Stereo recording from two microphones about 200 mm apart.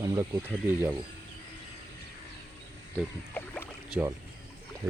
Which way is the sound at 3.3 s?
10° left (ahead or behind).